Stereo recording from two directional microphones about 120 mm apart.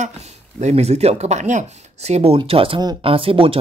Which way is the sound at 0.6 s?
65° right (ahead or behind).